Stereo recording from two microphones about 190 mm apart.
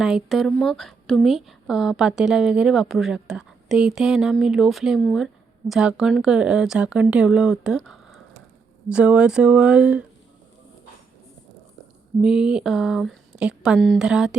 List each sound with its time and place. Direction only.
0.0 s a woman's voice: centre (ahead or behind)
12.2 s a woman's voice: 5° right (ahead or behind)